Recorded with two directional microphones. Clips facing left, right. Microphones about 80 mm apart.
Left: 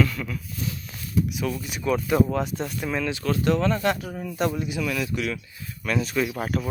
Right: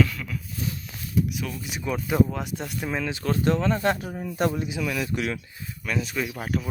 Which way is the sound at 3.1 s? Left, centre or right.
Right.